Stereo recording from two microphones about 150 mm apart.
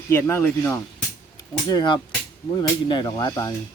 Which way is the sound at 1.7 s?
30° left (ahead or behind).